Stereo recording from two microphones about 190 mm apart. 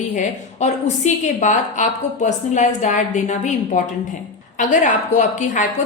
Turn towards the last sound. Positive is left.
turn(degrees=40)  # may be behind; listen again after turning